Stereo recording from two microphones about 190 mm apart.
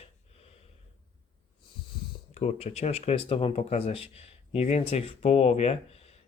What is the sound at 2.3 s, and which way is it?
Speech, 35° left (ahead or behind).